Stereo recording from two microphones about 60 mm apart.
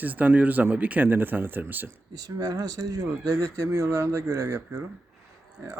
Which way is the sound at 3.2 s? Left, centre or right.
Right.